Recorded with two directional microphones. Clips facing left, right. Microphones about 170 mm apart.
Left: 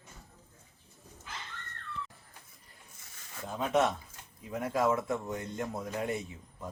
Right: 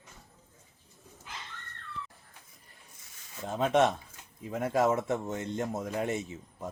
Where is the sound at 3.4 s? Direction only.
25° right (ahead or behind).